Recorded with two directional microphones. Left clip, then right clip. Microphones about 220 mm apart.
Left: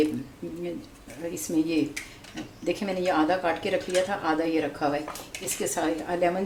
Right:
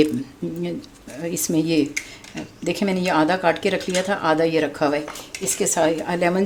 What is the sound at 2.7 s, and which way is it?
Speech, 50° right (ahead or behind).